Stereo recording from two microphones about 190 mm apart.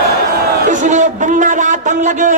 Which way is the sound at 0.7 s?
40° right (ahead or behind).